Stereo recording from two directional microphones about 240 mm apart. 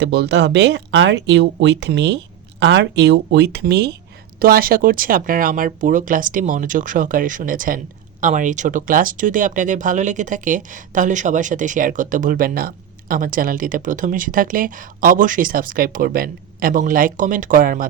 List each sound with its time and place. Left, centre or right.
0.0 s speech: right